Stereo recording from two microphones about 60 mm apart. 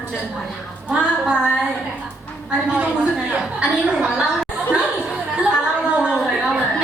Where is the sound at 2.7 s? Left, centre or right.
Centre.